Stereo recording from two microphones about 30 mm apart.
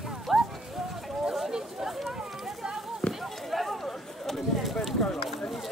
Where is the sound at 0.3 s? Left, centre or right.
Centre.